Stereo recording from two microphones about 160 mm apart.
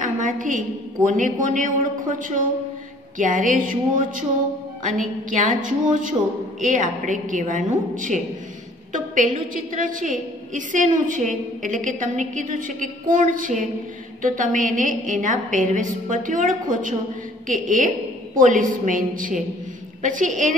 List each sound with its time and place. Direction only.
0.0 s a woman's voice: 55° right (ahead or behind)